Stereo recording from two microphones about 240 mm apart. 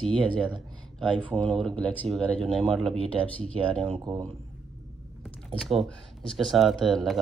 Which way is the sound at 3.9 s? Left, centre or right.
Centre.